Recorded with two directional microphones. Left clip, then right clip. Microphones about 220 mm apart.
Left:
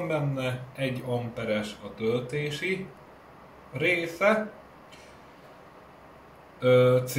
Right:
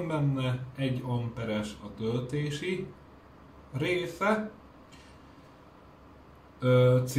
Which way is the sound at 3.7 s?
5° right (ahead or behind).